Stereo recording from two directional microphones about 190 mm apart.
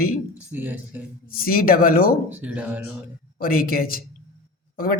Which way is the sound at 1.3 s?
50° left (ahead or behind).